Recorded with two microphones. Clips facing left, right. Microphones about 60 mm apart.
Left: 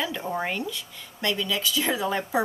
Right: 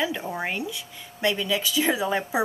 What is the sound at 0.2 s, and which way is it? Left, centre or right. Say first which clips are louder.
A woman's voice: left 1 dB; centre.